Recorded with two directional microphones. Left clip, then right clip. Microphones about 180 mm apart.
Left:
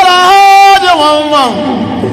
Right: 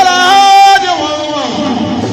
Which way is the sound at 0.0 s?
30° left (ahead or behind).